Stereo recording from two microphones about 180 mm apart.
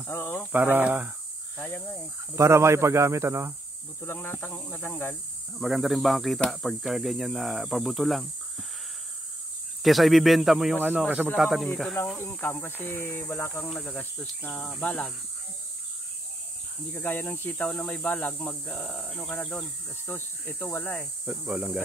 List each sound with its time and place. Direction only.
0.0 s speech: 10° left (ahead or behind)
0.5 s speech: 10° right (ahead or behind)
1.6 s speech: 10° left (ahead or behind)
2.3 s speech: 15° right (ahead or behind)
4.0 s speech: 10° left (ahead or behind)
5.6 s speech: centre (ahead or behind)
9.8 s speech: centre (ahead or behind)
16.9 s speech: 10° left (ahead or behind)
21.3 s speech: 5° right (ahead or behind)